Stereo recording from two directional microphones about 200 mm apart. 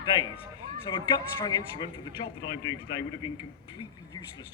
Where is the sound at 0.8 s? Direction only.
25° left (ahead or behind).